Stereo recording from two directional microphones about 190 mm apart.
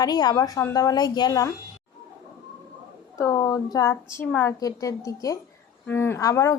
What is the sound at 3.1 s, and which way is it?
A woman's voice, 15° left (ahead or behind).